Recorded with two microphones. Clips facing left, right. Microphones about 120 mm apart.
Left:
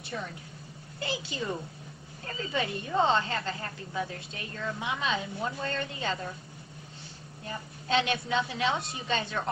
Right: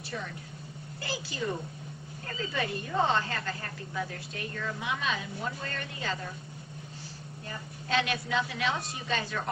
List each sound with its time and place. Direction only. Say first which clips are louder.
1.0 s speech: left 1 dB; 25° left (ahead or behind)
7.4 s speech: left 3 dB; 25° left (ahead or behind)